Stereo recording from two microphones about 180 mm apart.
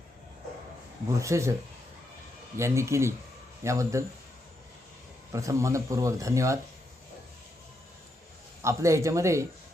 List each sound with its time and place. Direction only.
1.2 s speech: 15° right (ahead or behind)
2.6 s speech: 15° right (ahead or behind)
5.3 s speech: 15° right (ahead or behind)
8.6 s speech: 15° right (ahead or behind)